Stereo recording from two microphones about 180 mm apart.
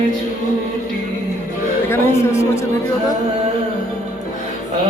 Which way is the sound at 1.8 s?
15° left (ahead or behind).